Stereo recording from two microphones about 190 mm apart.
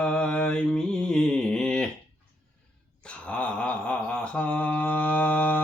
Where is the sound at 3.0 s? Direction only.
5° left (ahead or behind).